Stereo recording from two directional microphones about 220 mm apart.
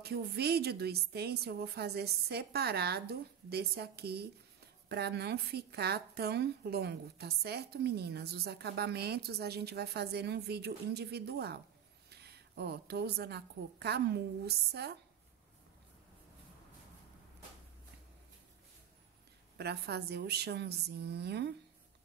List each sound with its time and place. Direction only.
0.0 s speech: 45° right (ahead or behind)
19.5 s speech: 50° right (ahead or behind)